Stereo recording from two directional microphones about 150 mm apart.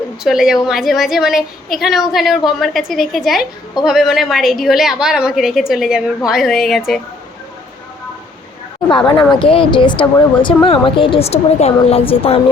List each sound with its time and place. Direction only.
0.3 s a woman's voice: 5° right (ahead or behind)
9.0 s speech: 25° left (ahead or behind)